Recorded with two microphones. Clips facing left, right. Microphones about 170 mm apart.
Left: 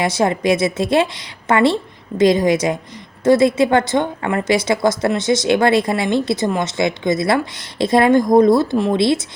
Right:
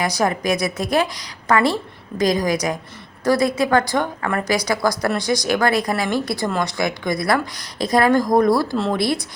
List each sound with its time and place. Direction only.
0.0 s a woman's voice: 25° left (ahead or behind)